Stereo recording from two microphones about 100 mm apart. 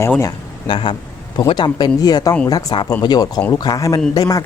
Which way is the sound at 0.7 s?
55° left (ahead or behind).